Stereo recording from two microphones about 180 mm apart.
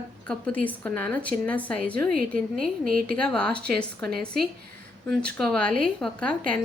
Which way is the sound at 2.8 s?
50° right (ahead or behind).